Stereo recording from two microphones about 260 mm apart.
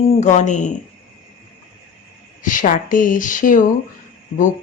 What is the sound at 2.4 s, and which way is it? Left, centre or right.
Speech, left.